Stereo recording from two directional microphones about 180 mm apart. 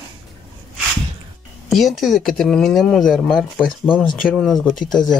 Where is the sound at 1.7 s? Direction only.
Centre (ahead or behind).